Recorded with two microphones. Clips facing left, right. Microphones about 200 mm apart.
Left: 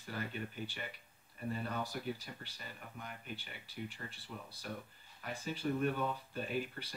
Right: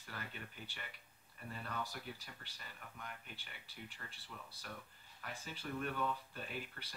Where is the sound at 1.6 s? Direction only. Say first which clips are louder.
Left 2 dB; 20° left (ahead or behind).